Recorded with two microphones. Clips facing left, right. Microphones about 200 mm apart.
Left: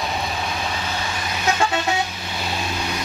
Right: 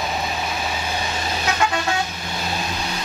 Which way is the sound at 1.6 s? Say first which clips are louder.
Right 1 dB; 25° left (ahead or behind).